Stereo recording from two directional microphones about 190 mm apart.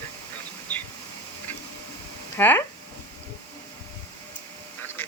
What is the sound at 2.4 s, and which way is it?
Speech, 10° left (ahead or behind).